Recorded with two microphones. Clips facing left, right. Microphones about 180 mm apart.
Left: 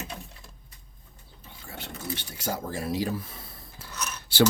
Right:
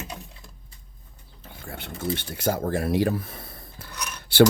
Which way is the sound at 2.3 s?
60° right (ahead or behind).